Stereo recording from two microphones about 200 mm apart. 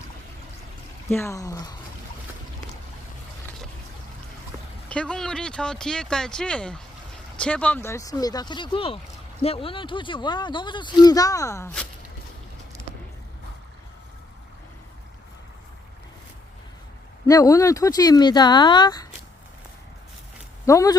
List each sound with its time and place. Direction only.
1.1 s speech: 15° left (ahead or behind)
4.9 s speech: 5° left (ahead or behind)
17.2 s speech: 15° left (ahead or behind)
20.7 s speech: 15° left (ahead or behind)